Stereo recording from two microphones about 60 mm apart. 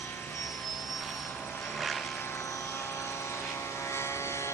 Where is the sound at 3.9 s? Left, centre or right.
Left.